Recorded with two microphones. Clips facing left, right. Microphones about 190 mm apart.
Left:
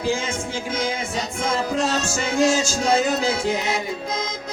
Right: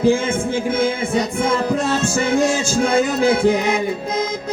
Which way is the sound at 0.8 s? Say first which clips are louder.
Right 6 dB; 55° right (ahead or behind).